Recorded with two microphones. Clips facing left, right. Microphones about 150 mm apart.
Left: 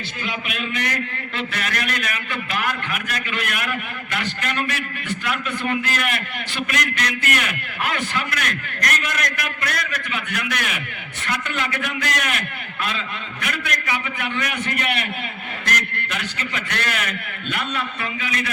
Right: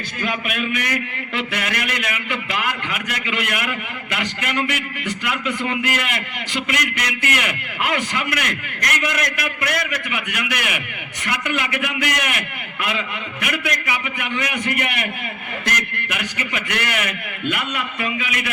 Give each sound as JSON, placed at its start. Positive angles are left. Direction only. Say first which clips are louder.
{"t": 0.2, "sound": "a man's voice", "louder": "right 5 dB", "side_deg": -55}
{"t": 0.8, "sound": "a man's voice", "louder": "right 1 dB", "side_deg": -15}